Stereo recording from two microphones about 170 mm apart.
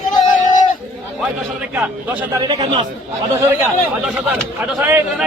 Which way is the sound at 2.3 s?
25° right (ahead or behind).